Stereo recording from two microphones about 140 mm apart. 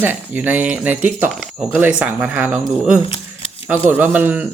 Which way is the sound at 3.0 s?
40° left (ahead or behind).